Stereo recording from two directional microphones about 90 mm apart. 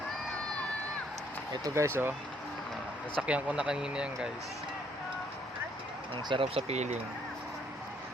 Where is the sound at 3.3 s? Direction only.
15° right (ahead or behind).